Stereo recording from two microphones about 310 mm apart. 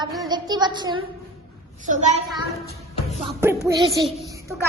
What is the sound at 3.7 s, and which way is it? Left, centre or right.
Speech, centre.